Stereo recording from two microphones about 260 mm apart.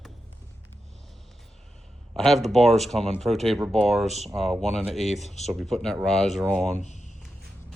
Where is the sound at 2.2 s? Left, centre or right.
Centre.